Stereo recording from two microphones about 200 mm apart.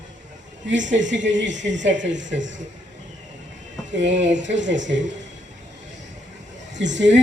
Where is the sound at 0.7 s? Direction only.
65° right (ahead or behind).